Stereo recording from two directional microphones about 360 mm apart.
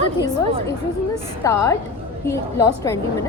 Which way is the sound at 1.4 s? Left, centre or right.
Centre.